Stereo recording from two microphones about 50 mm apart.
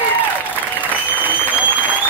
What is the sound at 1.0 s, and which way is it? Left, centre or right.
Applause, right.